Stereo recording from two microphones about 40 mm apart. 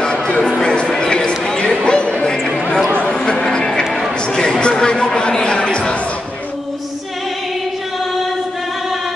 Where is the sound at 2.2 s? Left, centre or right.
Centre.